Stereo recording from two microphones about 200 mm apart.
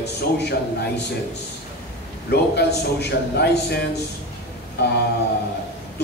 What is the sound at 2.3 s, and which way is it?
A man's voice, 55° left (ahead or behind).